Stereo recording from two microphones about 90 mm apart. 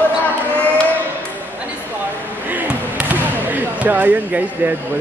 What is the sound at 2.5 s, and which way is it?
Basketball bounce, 20° right (ahead or behind).